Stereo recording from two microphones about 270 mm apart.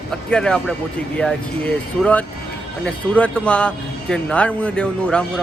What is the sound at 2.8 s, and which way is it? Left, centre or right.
Speech, centre.